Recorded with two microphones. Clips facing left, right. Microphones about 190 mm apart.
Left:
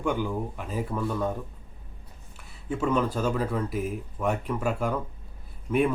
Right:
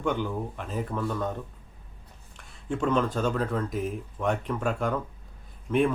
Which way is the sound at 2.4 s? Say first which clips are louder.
Even; 5° left (ahead or behind).